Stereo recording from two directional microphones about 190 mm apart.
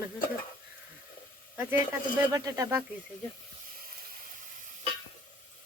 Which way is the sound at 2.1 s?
15° right (ahead or behind).